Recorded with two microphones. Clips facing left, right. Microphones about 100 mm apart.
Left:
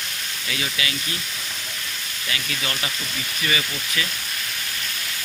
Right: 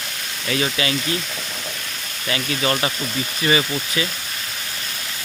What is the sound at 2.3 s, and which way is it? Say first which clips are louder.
Speech: right 8 dB; 35° right (ahead or behind).